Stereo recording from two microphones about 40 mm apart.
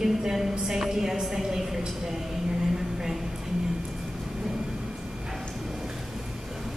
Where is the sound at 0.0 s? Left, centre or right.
Centre.